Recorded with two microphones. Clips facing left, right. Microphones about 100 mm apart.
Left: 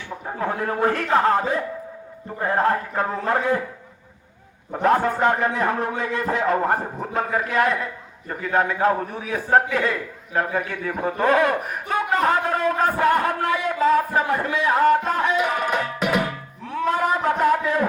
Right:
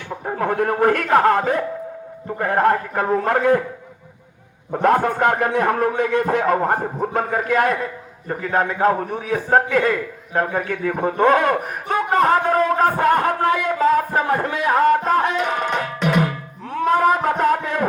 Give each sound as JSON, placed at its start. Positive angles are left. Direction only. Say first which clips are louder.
{"t": 0.3, "sound": "a man's voice", "louder": "right 5 dB", "side_deg": -60}
{"t": 4.8, "sound": "a man's voice", "louder": "right 2 dB", "side_deg": -50}
{"t": 16.2, "sound": "music", "louder": "right 4 dB", "side_deg": -45}